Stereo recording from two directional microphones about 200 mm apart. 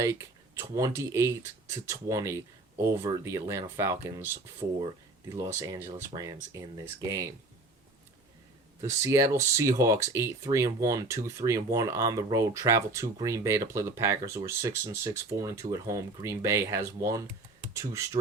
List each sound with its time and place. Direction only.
0.0 s speech: 15° right (ahead or behind)
5.5 s speech: 15° right (ahead or behind)
8.8 s speech: 15° right (ahead or behind)